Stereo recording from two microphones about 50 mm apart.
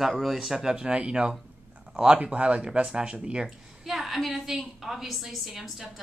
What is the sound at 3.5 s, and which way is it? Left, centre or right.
A woman's voice, centre.